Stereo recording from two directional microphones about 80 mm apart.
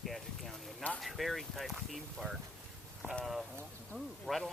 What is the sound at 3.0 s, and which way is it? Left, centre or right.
Speech, right.